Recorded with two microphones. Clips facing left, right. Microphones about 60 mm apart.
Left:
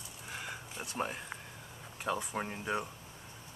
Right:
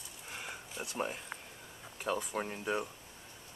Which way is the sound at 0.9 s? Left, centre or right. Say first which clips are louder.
Left 1 dB; centre.